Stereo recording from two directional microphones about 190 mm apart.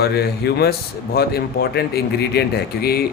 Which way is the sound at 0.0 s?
60° left (ahead or behind).